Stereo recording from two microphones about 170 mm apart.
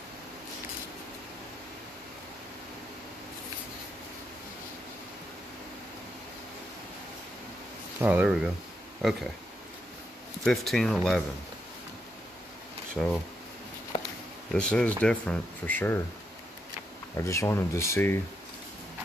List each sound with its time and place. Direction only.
8.0 s speech: 10° right (ahead or behind)
10.4 s speech: centre (ahead or behind)
12.9 s speech: 5° left (ahead or behind)
13.9 s a sound: 30° left (ahead or behind)
14.5 s speech: 5° left (ahead or behind)
17.2 s speech: 15° left (ahead or behind)